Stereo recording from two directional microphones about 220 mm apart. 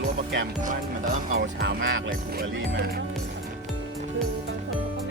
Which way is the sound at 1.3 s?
40° right (ahead or behind).